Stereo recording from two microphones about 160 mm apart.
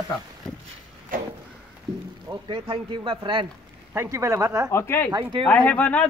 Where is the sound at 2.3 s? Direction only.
30° right (ahead or behind).